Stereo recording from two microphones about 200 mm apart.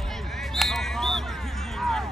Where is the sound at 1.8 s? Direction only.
Centre (ahead or behind).